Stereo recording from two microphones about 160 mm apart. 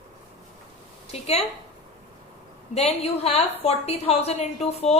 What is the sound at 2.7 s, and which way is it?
A woman's voice, 40° left (ahead or behind).